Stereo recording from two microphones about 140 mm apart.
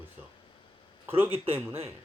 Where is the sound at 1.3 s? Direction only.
45° right (ahead or behind).